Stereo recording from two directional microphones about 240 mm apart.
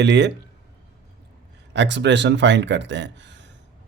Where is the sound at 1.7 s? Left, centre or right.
Right.